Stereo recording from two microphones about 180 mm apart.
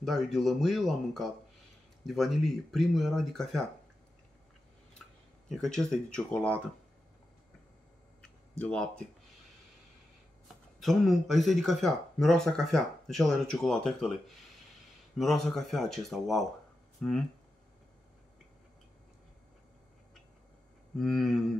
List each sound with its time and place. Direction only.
0.0 s speech: centre (ahead or behind)
5.5 s speech: 5° left (ahead or behind)
8.2 s a sound: 5° left (ahead or behind)
10.5 s speech: centre (ahead or behind)
15.1 s speech: centre (ahead or behind)
21.0 s speech: centre (ahead or behind)